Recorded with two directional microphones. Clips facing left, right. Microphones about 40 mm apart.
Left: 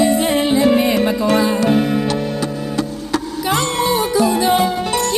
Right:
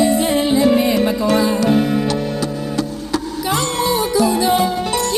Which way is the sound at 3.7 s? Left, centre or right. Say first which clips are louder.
Left 1 dB; left.